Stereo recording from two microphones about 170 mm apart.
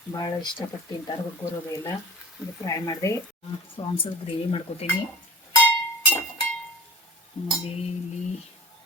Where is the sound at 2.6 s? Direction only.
20° left (ahead or behind).